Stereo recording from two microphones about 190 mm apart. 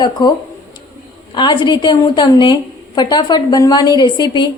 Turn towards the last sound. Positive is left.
turn(degrees=25)  # may be behind; listen again after turning